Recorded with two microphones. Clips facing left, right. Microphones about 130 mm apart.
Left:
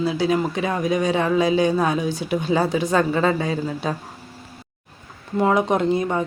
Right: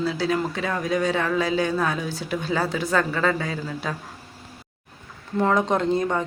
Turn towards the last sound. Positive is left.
turn(degrees=10)  # may be behind; listen again after turning